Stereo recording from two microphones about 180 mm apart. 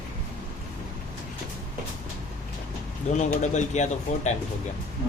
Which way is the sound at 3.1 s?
40° left (ahead or behind).